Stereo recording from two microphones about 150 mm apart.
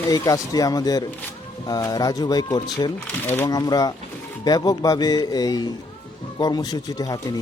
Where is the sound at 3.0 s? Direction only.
15° left (ahead or behind).